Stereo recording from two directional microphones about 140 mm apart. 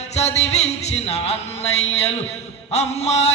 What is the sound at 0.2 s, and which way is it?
Music, 50° left (ahead or behind).